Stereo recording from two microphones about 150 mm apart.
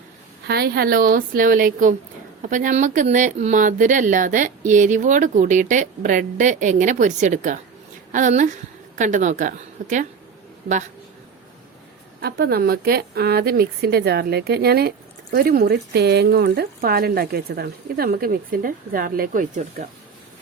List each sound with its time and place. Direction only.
0.4 s a woman's voice: 90° right; by 10.1 s 60° right (ahead or behind)
12.2 s a woman's voice: 90° right; by 19.9 s 60° right (ahead or behind)